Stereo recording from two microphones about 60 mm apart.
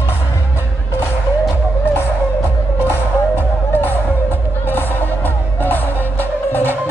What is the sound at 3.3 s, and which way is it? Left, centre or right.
Music, left.